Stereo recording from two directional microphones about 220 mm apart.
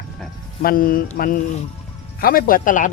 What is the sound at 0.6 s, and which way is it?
Speech, 40° left (ahead or behind).